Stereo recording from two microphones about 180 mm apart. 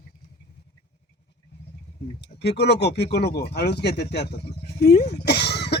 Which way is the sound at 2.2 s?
70° left (ahead or behind).